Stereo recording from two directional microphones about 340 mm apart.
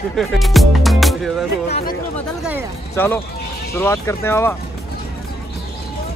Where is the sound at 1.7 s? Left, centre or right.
Centre.